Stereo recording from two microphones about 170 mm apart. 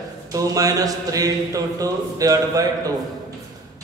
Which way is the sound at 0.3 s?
20° right (ahead or behind).